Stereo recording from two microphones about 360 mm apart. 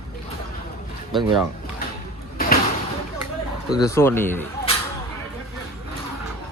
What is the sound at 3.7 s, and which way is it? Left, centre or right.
Speech, centre.